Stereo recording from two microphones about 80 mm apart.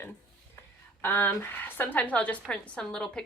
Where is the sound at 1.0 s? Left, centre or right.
Left.